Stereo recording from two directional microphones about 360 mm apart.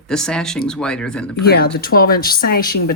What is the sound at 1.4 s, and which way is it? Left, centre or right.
Speech, left.